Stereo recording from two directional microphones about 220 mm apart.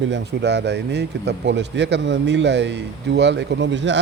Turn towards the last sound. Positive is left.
turn(degrees=-55)  # may be behind; listen again after turning